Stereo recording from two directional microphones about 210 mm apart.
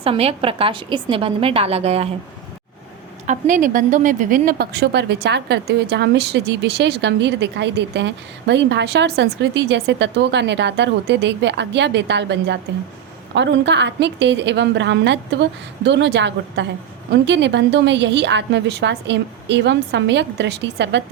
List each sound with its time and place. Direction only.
0.0 s a woman's voice: 30° right (ahead or behind)
3.2 s a woman's voice: 40° right (ahead or behind); by 21.0 s 55° right (ahead or behind)